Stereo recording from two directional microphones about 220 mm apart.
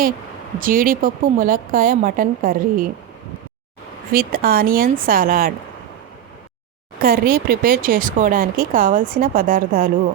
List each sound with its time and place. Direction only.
0.6 s speech: 40° right (ahead or behind)
4.1 s speech: 40° right (ahead or behind)
7.0 s speech: 40° right (ahead or behind)